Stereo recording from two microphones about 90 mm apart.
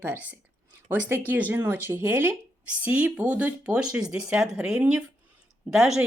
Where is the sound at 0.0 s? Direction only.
20° right (ahead or behind).